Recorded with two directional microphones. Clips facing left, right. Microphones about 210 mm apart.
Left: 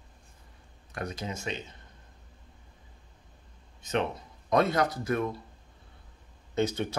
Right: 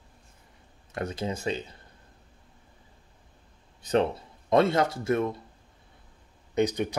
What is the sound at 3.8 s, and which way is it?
Speech, 30° right (ahead or behind).